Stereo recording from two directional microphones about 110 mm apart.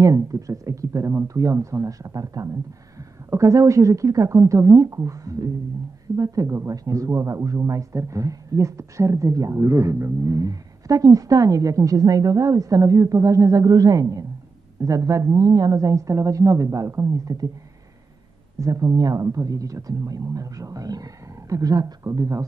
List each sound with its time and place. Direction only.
0.0 s a woman's voice: 30° right (ahead or behind)
18.6 s speech: 30° right (ahead or behind)